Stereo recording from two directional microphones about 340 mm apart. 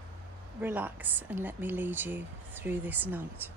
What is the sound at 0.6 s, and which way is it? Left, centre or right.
Speech, centre.